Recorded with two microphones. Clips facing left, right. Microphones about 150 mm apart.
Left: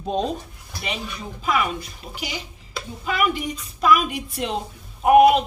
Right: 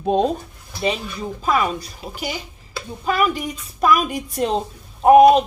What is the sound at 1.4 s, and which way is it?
A woman's voice, 40° right (ahead or behind).